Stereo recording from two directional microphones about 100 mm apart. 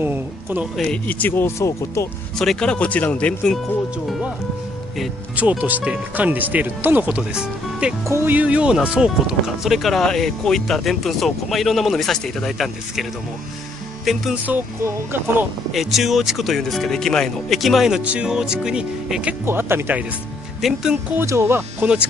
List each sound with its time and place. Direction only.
0.0 s speech: 20° right (ahead or behind)
0.8 s speech: 15° left (ahead or behind); by 2.0 s 30° left (ahead or behind)
2.3 s speech: 5° left (ahead or behind)
5.3 s speech: 15° right (ahead or behind)
8.0 s speech: 25° right (ahead or behind); by 13.0 s centre (ahead or behind)
14.3 s speech: 15° right (ahead or behind)
15.7 s speech: centre (ahead or behind)
19.4 s speech: 25° right (ahead or behind)
20.6 s speech: 5° right (ahead or behind)
21.2 s speech: 25° right (ahead or behind)